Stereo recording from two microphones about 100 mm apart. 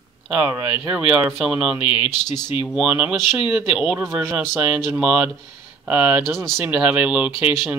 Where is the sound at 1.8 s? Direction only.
65° left (ahead or behind).